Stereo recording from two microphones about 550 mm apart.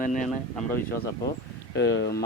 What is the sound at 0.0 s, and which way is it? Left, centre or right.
Speech, centre.